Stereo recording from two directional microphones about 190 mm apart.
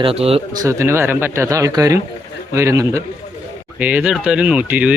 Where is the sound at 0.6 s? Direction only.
15° right (ahead or behind).